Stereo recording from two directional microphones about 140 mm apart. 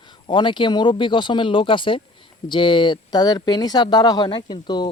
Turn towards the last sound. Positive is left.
turn(degrees=30)  # may be behind; listen again after turning